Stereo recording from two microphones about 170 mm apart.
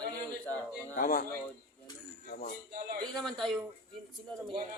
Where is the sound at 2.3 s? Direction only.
65° left (ahead or behind).